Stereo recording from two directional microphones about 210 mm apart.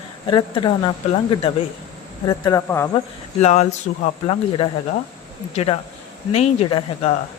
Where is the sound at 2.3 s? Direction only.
15° left (ahead or behind).